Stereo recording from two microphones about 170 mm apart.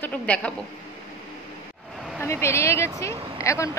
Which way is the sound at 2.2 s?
15° left (ahead or behind).